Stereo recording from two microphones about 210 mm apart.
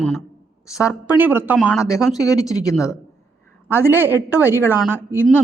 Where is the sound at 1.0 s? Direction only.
10° right (ahead or behind).